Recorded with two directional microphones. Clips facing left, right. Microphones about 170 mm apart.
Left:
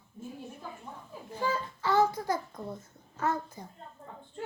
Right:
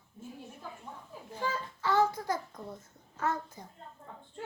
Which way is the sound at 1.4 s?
10° left (ahead or behind).